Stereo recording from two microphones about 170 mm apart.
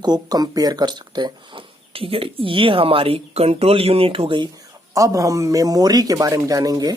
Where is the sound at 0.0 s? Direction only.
25° right (ahead or behind).